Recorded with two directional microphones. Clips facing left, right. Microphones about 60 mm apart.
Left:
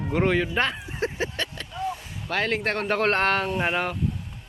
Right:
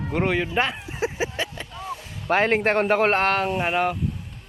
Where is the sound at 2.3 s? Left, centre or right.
Right.